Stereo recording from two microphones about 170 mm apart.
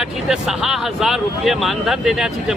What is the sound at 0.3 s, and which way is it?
Speech, centre (ahead or behind).